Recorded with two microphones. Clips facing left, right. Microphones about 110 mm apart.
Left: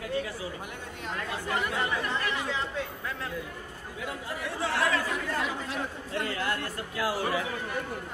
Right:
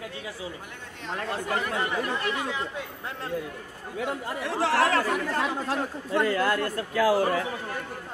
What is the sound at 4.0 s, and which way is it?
Speech, 70° right (ahead or behind).